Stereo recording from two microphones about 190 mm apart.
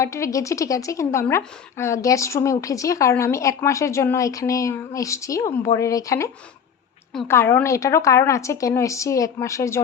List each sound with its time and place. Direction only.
0.0 s a woman's voice: 15° left (ahead or behind)